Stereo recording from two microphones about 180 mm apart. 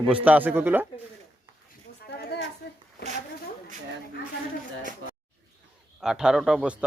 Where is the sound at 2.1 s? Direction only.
60° left (ahead or behind).